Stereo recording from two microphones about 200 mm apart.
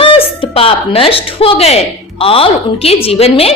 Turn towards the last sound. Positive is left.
turn(degrees=30)  # may be behind; listen again after turning